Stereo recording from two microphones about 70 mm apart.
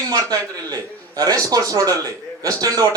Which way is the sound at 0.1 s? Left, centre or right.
Right.